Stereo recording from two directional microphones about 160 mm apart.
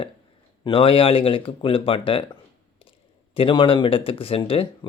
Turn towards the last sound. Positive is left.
turn(degrees=35)  # may be behind; listen again after turning